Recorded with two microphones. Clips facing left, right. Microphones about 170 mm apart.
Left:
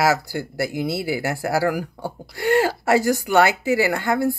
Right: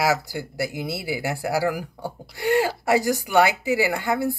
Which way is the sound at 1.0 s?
15° right (ahead or behind).